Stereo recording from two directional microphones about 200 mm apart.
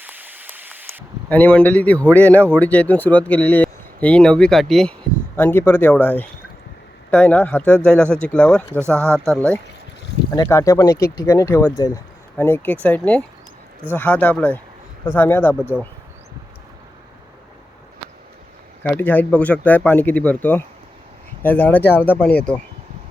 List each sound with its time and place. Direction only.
0.0 s rain: 10° right (ahead or behind)
1.3 s a man's voice: 5° left (ahead or behind)
10.3 s a man's voice: 15° left (ahead or behind)
18.8 s a man's voice: 10° left (ahead or behind)